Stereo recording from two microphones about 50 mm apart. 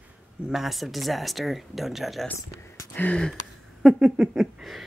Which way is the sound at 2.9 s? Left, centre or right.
Left.